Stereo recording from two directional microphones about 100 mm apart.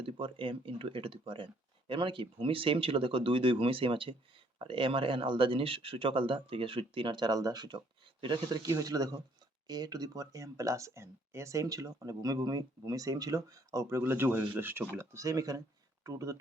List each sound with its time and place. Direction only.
0.0 s speech: 60° right (ahead or behind); by 14.0 s 35° right (ahead or behind)
14.0 s speech: 20° right (ahead or behind)